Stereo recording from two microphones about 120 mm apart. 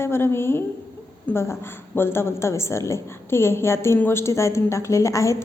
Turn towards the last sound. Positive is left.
turn(degrees=25)  # may be behind; listen again after turning